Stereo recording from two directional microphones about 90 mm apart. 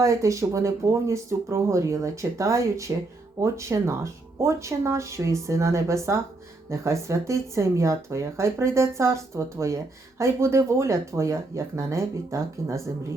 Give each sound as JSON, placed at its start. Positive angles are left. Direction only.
{"t": 0.0, "sound": "speech", "side_deg": -35}